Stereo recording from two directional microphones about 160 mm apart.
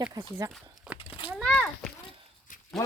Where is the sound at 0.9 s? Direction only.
5° right (ahead or behind).